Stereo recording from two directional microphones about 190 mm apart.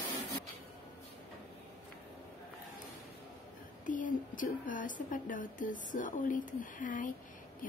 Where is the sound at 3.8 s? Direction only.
45° left (ahead or behind).